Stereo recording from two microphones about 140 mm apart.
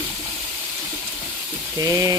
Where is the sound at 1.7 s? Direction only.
25° right (ahead or behind).